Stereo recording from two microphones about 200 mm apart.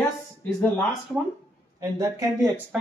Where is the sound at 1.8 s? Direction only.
15° right (ahead or behind).